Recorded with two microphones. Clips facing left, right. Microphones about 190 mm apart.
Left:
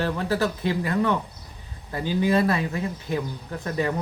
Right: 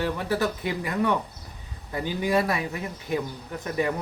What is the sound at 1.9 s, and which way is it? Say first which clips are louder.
Speech: left 2 dB; 15° right (ahead or behind).